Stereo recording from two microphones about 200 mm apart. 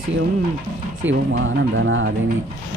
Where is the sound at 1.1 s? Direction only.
70° right (ahead or behind).